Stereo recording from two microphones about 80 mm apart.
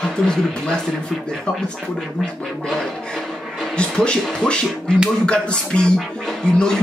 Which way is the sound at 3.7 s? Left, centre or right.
Centre.